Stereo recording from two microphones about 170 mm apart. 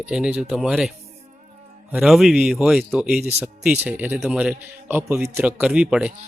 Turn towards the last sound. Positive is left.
turn(degrees=-5)  # may be behind; listen again after turning